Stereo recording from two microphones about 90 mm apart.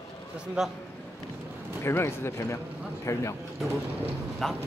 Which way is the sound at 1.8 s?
30° left (ahead or behind).